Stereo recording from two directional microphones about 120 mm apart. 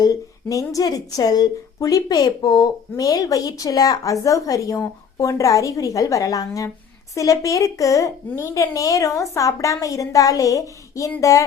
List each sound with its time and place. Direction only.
0.0 s a woman's voice: 30° left (ahead or behind)